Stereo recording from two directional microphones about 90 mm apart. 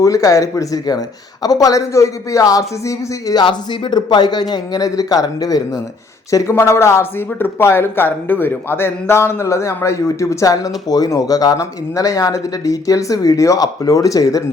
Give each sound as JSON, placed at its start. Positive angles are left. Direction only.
{"t": 0.0, "sound": "speech", "side_deg": 40}
{"t": 3.4, "sound": "a man's voice", "side_deg": 60}
{"t": 6.3, "sound": "speech", "side_deg": 30}